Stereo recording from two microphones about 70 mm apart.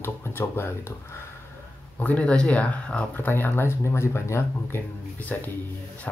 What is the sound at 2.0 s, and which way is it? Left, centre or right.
Speech, left.